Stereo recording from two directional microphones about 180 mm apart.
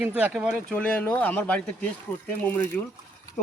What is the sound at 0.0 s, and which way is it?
Speech, 10° right (ahead or behind).